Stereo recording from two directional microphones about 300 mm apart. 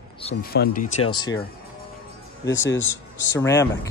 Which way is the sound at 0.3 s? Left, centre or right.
Left.